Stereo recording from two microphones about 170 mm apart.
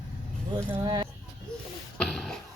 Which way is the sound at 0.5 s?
25° right (ahead or behind).